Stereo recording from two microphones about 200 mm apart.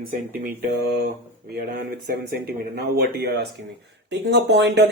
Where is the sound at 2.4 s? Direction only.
50° right (ahead or behind).